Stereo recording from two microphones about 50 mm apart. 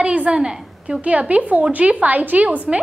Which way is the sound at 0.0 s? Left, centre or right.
Right.